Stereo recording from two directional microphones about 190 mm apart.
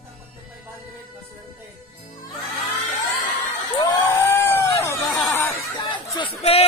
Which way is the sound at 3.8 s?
15° left (ahead or behind).